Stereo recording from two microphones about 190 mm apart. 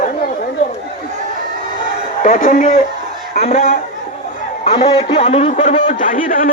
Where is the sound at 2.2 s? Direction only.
40° left (ahead or behind).